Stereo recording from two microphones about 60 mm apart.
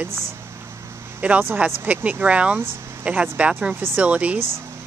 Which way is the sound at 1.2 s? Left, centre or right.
Right.